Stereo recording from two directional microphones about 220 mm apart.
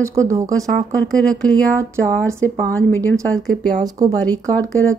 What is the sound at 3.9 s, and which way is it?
Speech, 15° right (ahead or behind).